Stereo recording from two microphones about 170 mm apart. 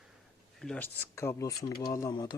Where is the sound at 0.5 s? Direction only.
5° left (ahead or behind).